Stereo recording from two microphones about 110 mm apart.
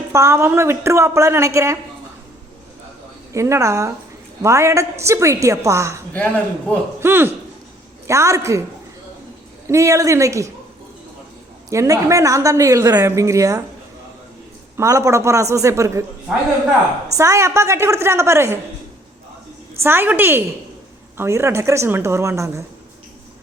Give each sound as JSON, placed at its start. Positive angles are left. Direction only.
{"t": 0.1, "sound": "a woman's voice", "side_deg": -25}
{"t": 3.3, "sound": "a woman's voice", "side_deg": -25}
{"t": 6.1, "sound": "speech", "side_deg": 15}
{"t": 7.0, "sound": "a man's voice", "side_deg": -20}
{"t": 9.6, "sound": "a woman's voice", "side_deg": -30}
{"t": 11.7, "sound": "a woman's voice", "side_deg": -25}
{"t": 14.8, "sound": "a woman's voice", "side_deg": -30}
{"t": 17.2, "sound": "a woman's voice", "side_deg": -25}
{"t": 19.8, "sound": "a woman's voice", "side_deg": -20}